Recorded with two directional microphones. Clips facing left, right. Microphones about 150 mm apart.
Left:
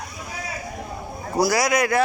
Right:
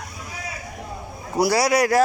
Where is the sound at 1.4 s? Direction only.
30° right (ahead or behind).